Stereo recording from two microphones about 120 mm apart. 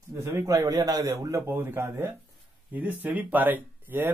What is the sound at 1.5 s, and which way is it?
A man's voice, 20° right (ahead or behind).